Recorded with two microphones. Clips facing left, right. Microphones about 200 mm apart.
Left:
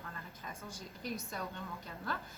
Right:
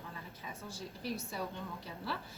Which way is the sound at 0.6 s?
30° right (ahead or behind).